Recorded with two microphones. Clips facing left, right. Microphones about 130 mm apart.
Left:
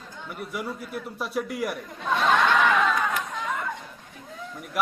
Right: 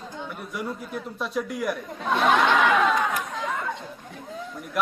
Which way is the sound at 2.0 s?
10° right (ahead or behind).